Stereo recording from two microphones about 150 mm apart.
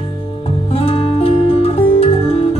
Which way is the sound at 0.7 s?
40° left (ahead or behind).